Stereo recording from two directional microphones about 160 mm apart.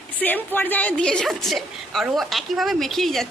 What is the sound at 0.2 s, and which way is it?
A woman's voice, 10° left (ahead or behind).